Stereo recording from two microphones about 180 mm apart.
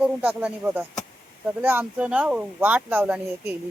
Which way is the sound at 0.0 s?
10° right (ahead or behind).